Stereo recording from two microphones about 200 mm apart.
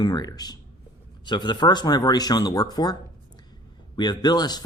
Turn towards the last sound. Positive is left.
turn(degrees=20)  # may be behind; listen again after turning